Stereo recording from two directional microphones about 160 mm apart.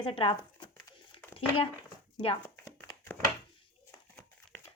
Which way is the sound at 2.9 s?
20° left (ahead or behind).